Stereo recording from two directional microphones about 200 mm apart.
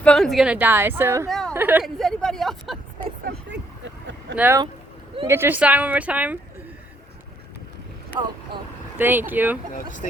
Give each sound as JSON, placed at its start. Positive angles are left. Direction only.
{"t": 0.0, "sound": "a woman's voice", "side_deg": 5}
{"t": 1.3, "sound": "a sound", "side_deg": 5}
{"t": 1.5, "sound": "speech", "side_deg": -10}
{"t": 3.2, "sound": "vehicle", "side_deg": -60}
{"t": 4.4, "sound": "a woman's voice", "side_deg": -10}
{"t": 8.1, "sound": "a woman's voice", "side_deg": -15}
{"t": 9.7, "sound": "speech", "side_deg": 40}